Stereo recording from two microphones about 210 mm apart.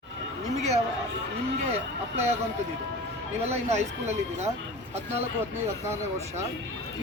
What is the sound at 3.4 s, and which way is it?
Speech, 30° right (ahead or behind).